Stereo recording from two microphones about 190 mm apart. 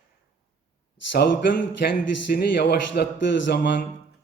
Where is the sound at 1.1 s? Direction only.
60° left (ahead or behind).